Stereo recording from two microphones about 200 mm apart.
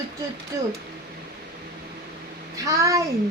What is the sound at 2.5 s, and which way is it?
Speech, 15° right (ahead or behind).